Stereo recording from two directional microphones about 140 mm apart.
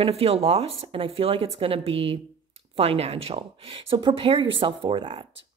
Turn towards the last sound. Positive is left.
turn(degrees=-35)  # may be behind; listen again after turning